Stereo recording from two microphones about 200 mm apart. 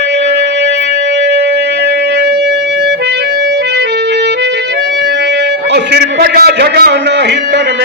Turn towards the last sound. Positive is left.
turn(degrees=-60)  # may be behind; listen again after turning